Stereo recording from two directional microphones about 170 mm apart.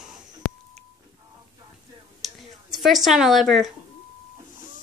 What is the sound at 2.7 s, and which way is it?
A woman's voice, centre (ahead or behind).